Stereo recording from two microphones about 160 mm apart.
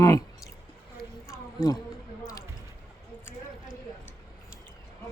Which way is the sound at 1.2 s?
5° right (ahead or behind).